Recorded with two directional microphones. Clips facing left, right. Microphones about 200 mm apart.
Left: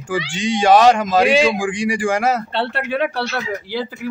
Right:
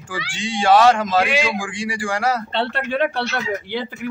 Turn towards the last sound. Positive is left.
turn(degrees=5)  # may be behind; listen again after turning